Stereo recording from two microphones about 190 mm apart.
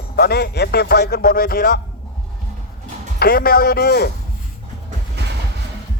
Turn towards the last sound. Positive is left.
turn(degrees=-60)  # may be behind; listen again after turning